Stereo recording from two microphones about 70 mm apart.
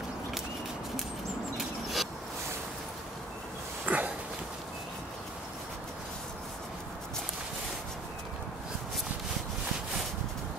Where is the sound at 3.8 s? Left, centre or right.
Right.